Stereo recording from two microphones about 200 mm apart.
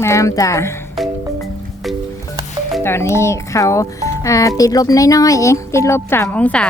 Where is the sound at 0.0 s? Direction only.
15° left (ahead or behind).